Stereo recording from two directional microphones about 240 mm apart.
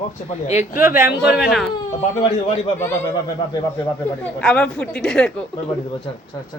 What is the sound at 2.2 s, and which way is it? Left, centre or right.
Speech, left.